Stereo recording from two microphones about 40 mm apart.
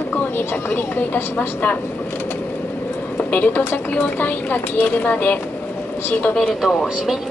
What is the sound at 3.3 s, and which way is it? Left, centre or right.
Speech, left.